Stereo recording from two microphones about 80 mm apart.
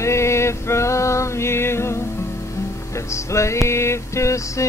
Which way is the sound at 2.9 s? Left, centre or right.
Left.